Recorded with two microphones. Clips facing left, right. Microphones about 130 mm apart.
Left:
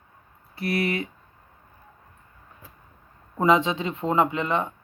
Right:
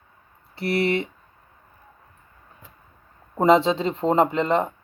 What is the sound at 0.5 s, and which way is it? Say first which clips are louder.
Speech: right 3 dB; 30° right (ahead or behind).